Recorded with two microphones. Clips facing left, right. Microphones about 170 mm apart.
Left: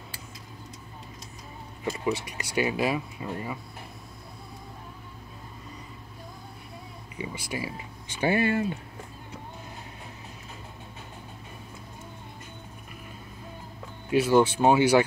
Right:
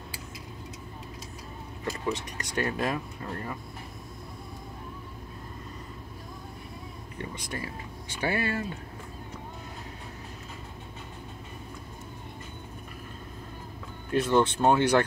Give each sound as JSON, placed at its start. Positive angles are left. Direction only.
{"t": 1.9, "sound": "speech", "side_deg": 10}
{"t": 7.2, "sound": "speech", "side_deg": 5}
{"t": 8.1, "sound": "speech", "side_deg": 20}
{"t": 14.1, "sound": "speech", "side_deg": 10}